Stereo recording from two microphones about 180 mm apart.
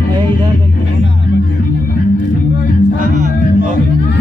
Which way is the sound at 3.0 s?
45° right (ahead or behind).